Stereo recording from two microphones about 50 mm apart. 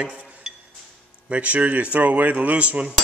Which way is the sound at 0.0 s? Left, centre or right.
Right.